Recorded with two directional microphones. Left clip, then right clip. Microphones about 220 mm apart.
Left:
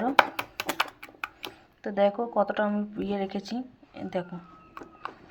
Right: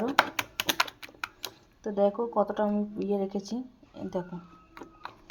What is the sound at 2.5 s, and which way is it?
Speech, 10° left (ahead or behind).